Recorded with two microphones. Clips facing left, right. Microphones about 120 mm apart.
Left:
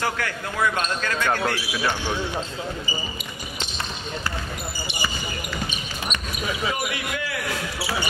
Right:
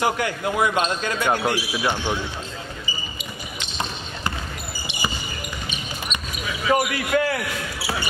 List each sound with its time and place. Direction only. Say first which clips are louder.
0.0 s speech: right 5 dB; 20° right (ahead or behind)
6.7 s speech: right 8 dB; 50° right (ahead or behind)